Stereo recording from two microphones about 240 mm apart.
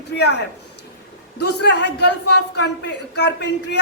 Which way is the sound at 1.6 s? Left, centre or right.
Left.